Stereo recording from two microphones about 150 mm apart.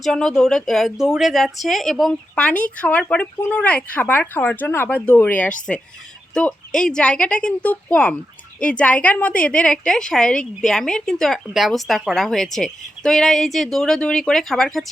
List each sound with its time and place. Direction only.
0.0 s a woman's voice: 5° left (ahead or behind)